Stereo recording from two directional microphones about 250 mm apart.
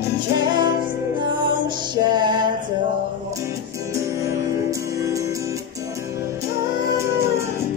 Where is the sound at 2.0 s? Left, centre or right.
Centre.